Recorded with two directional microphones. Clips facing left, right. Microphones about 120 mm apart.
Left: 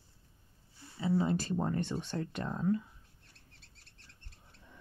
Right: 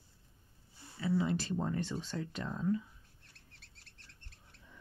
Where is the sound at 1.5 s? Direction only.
55° left (ahead or behind).